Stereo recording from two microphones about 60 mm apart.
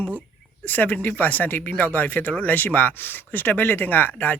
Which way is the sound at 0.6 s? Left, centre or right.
Left.